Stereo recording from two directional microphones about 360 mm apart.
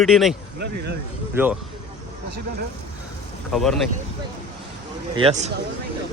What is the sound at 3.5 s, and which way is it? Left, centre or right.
Speech, centre.